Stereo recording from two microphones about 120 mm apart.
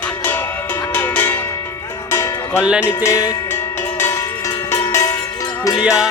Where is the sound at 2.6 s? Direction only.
10° right (ahead or behind).